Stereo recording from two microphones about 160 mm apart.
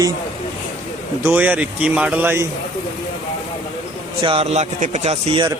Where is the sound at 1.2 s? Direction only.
10° right (ahead or behind).